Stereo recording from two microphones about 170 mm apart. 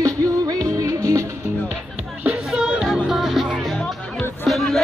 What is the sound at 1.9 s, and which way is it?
Music, centre (ahead or behind).